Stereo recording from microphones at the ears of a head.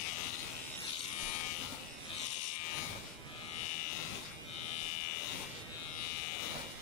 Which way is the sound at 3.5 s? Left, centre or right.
Left.